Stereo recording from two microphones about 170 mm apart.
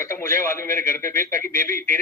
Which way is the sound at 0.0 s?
15° left (ahead or behind).